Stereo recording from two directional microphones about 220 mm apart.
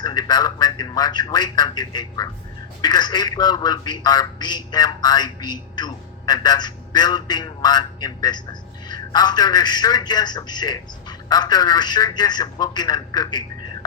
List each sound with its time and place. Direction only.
0.0 s a man's voice: 20° left (ahead or behind)